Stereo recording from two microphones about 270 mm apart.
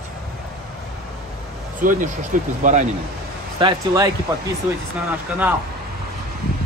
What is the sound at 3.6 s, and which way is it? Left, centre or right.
Speech, centre.